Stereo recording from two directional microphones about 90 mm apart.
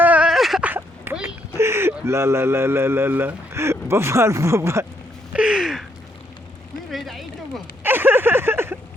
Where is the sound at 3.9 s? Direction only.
30° right (ahead or behind).